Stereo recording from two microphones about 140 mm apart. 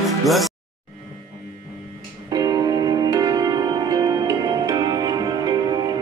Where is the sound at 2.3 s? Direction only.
30° right (ahead or behind).